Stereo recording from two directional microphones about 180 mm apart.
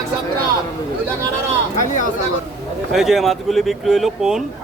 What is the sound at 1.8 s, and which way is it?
Speech, 45° left (ahead or behind).